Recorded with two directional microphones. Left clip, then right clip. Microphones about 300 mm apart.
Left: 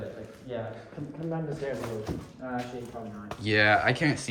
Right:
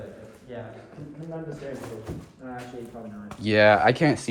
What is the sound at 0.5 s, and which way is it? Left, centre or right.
Speech, left.